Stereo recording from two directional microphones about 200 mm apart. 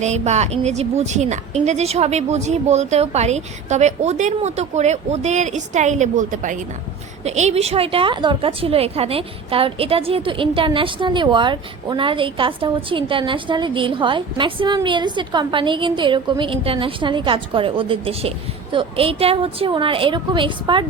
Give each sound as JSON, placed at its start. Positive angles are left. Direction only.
{"t": 0.0, "sound": "a woman's voice", "side_deg": -35}